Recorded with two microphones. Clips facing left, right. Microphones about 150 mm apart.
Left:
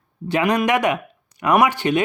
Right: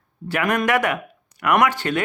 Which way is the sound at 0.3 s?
15° left (ahead or behind).